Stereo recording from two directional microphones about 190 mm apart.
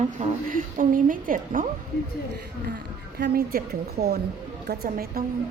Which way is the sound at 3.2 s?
50° right (ahead or behind).